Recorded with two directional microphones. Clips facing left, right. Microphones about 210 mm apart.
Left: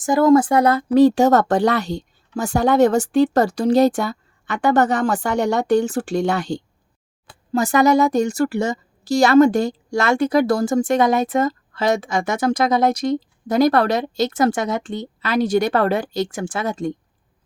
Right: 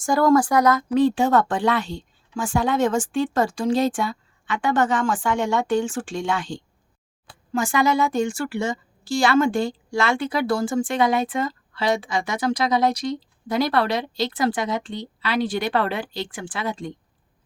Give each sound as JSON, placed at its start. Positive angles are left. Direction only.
{"t": 0.0, "sound": "speech", "side_deg": 20}
{"t": 0.9, "sound": "a woman's voice", "side_deg": 40}